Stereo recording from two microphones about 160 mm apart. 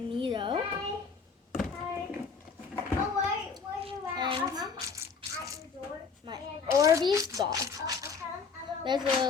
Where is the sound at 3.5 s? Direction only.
30° right (ahead or behind).